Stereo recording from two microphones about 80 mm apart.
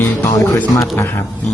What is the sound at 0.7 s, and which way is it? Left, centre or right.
Speech, left.